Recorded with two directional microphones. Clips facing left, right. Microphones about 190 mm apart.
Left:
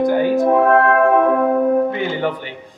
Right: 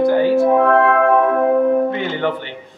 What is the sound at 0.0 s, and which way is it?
Music, 15° left (ahead or behind).